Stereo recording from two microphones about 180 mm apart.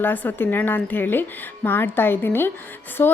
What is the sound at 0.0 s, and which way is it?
A woman's voice, 10° left (ahead or behind).